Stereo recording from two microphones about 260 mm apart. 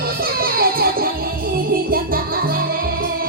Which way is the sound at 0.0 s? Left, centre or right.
Right.